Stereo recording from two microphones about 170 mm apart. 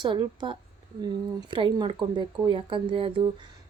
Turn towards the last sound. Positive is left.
turn(degrees=-30)  # may be behind; listen again after turning